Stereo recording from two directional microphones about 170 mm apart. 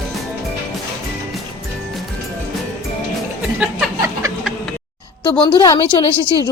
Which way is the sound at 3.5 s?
10° right (ahead or behind).